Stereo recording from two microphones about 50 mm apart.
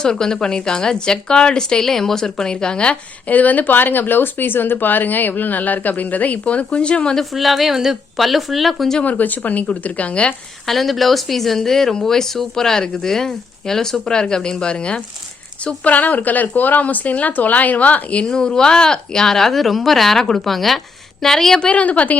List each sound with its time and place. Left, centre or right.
0.0 s a woman's voice: centre
7.2 s speech: centre
9.0 s speech: left
10.7 s speech: centre
15.6 s speech: left
18.3 s speech: centre
21.7 s a woman's voice: left